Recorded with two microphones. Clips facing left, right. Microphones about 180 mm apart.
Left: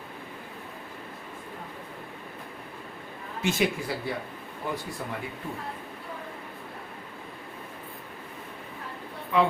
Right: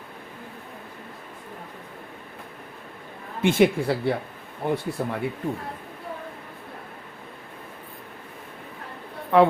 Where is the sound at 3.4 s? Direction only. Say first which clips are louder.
Right 8 dB; 60° right (ahead or behind).